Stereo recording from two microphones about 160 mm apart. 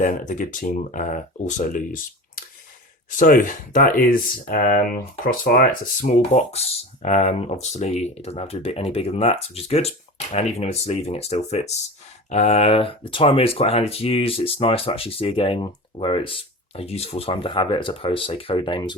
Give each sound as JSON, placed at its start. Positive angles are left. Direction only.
{"t": 0.0, "sound": "speech", "side_deg": 55}